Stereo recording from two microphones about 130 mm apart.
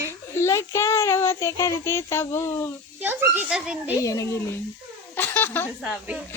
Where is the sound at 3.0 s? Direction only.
15° right (ahead or behind).